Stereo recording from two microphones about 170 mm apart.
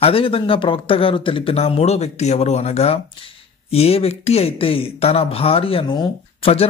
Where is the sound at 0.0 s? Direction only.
35° left (ahead or behind).